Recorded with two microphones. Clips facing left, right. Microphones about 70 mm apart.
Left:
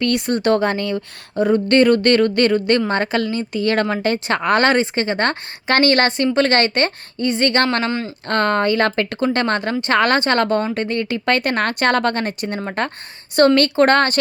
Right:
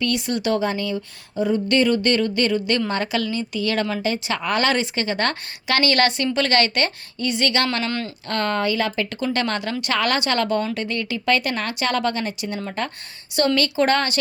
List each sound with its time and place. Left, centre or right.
0.0 s speech: left
7.9 s speech: left
8.3 s speech: left
9.2 s speech: left